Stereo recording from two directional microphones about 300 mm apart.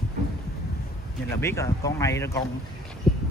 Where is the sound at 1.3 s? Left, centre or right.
Centre.